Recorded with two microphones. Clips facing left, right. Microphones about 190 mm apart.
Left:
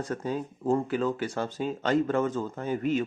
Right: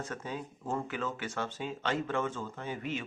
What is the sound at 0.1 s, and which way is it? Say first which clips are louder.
Speech: left 8 dB; 40° left (ahead or behind).